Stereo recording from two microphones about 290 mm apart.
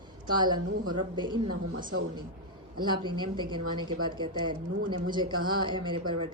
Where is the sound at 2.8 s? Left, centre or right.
Centre.